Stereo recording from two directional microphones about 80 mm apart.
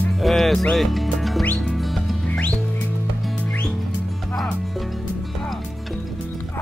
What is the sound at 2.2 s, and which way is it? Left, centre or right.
Music, centre.